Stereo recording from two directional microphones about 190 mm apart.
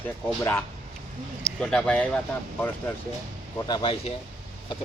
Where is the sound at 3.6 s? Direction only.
25° left (ahead or behind).